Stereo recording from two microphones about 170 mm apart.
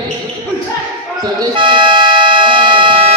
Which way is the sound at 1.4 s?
30° right (ahead or behind).